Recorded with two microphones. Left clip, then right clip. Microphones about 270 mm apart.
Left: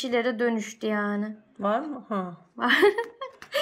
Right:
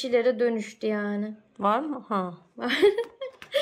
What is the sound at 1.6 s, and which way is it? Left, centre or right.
Speech, centre.